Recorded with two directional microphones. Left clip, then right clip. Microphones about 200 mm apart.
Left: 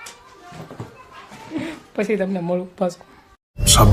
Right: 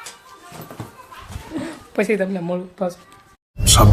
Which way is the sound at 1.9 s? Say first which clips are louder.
Right 3 dB; 20° right (ahead or behind).